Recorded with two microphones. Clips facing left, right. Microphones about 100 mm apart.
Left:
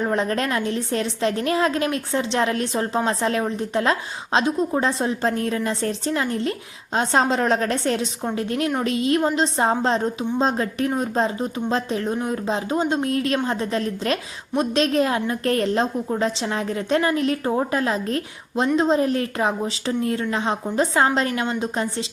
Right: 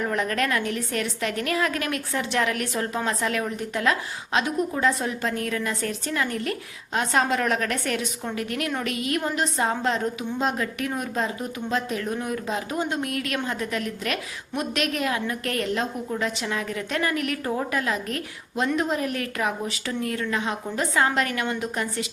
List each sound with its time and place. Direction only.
0.0 s a woman's voice: 30° left (ahead or behind)